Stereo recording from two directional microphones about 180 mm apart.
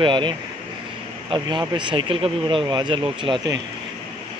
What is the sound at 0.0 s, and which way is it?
Speech, 25° right (ahead or behind).